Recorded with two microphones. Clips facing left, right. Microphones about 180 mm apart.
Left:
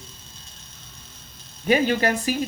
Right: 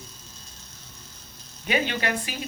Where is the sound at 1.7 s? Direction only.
40° left (ahead or behind).